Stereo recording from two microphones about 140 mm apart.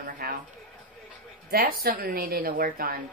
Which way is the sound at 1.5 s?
90° right.